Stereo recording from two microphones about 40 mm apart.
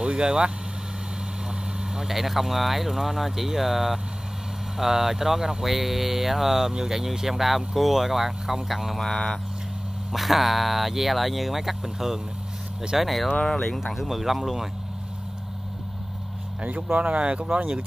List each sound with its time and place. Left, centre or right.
0.0 s speech: right
2.0 s speech: centre
9.0 s speech: centre
10.1 s speech: centre
13.5 s speech: centre
13.9 s speech: centre
16.9 s speech: right